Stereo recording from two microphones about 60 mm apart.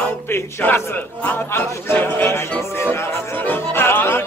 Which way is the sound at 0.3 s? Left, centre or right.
Left.